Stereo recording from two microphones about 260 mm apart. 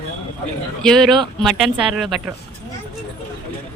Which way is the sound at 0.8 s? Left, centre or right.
Centre.